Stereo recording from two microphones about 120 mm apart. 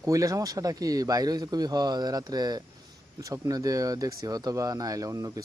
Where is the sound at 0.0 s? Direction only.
30° right (ahead or behind).